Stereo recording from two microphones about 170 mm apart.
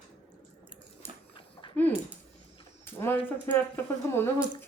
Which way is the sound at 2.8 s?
10° left (ahead or behind).